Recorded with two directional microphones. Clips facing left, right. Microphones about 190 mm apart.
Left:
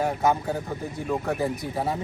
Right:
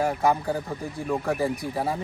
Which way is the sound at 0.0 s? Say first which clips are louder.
Even; centre (ahead or behind).